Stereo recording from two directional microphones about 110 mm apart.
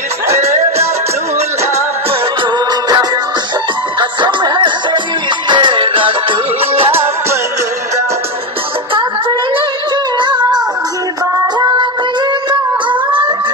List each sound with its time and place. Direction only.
0.4 s music: 70° right (ahead or behind)
4.0 s music: 45° right (ahead or behind); by 6.9 s 60° right (ahead or behind)
10.1 s music: 45° right (ahead or behind)